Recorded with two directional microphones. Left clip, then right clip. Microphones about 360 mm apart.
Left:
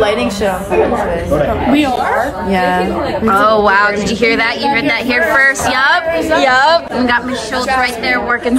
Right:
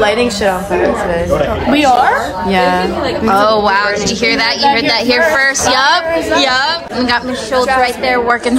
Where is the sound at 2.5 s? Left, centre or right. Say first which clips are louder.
Right 3 dB; centre.